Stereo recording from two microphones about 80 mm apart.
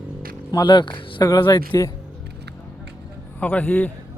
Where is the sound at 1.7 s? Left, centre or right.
Left.